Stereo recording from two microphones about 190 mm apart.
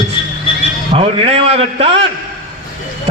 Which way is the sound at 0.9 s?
30° right (ahead or behind).